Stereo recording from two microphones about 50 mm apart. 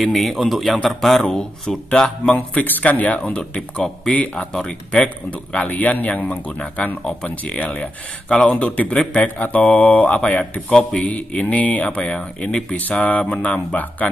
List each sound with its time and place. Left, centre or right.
0.0 s a man's voice: centre
1.2 s speech: centre
2.3 s speech: left